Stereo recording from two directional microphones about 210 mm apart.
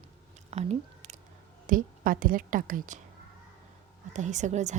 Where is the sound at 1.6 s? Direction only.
40° right (ahead or behind).